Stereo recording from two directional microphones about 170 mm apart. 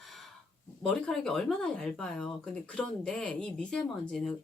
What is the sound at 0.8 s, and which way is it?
Speech, 5° left (ahead or behind).